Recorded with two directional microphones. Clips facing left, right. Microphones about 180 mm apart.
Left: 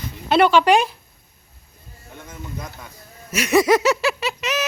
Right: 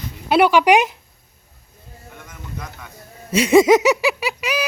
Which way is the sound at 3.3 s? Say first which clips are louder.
Right 4 dB; 30° right (ahead or behind).